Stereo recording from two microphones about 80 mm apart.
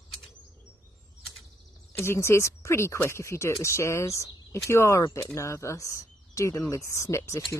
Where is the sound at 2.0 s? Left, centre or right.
Left.